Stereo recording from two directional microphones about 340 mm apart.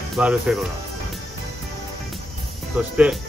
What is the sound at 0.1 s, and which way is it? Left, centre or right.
Speech, centre.